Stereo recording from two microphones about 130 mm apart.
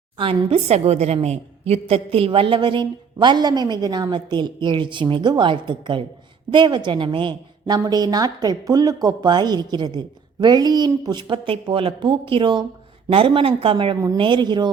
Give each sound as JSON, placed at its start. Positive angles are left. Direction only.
{"t": 0.2, "sound": "a woman's voice", "side_deg": -50}